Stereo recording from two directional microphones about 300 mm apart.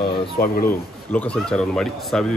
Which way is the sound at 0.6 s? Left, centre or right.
Centre.